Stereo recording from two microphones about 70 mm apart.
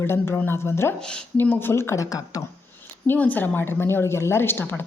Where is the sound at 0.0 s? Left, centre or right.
Left.